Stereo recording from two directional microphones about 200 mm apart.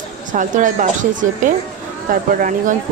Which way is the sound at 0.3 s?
40° right (ahead or behind).